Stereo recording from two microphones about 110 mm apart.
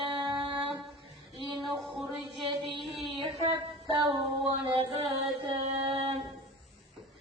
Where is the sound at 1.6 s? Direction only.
Centre (ahead or behind).